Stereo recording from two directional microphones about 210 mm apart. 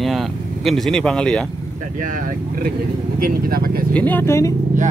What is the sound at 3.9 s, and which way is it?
Speech, 10° left (ahead or behind).